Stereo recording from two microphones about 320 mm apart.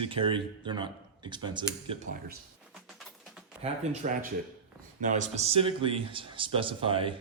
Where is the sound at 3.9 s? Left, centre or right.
Right.